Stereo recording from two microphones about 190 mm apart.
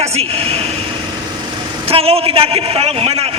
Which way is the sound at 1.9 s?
30° right (ahead or behind).